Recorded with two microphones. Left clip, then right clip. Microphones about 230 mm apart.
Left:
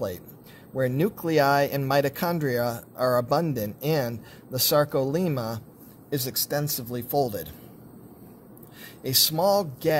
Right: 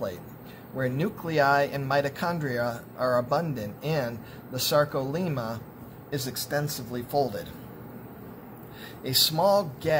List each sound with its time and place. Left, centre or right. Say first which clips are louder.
0.7 s speech: left 4 dB; left
9.0 s speech: even; left